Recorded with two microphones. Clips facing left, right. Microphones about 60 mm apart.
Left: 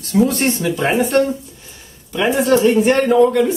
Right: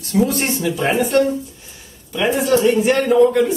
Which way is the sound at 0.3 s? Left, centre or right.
Centre.